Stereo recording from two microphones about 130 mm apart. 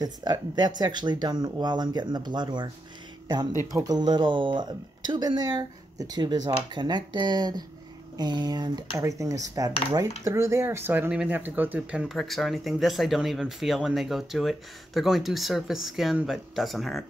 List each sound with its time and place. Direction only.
0.0 s speech: 30° right (ahead or behind); by 17.0 s centre (ahead or behind)